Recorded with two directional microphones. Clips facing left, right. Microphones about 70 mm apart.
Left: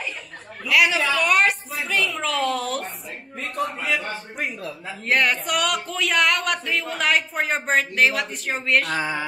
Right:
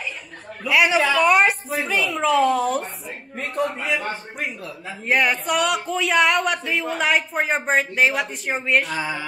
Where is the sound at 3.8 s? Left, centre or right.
Right.